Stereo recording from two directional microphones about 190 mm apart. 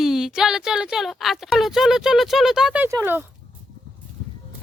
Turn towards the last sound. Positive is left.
turn(degrees=-10)  # may be behind; listen again after turning